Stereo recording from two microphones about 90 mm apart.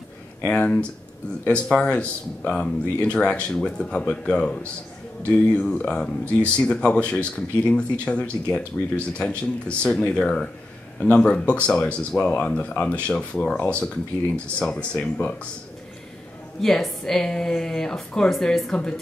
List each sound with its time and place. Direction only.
0.5 s speech: 15° left (ahead or behind)
16.6 s a woman's voice: 5° left (ahead or behind)